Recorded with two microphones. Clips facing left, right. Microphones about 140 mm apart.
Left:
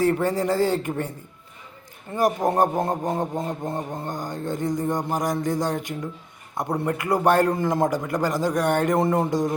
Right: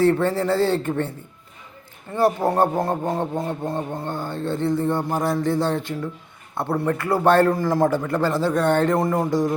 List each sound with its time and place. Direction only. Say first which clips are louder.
0.0 s speech: right 3 dB; 15° left (ahead or behind)
2.1 s a man's voice: right 2 dB; 15° left (ahead or behind)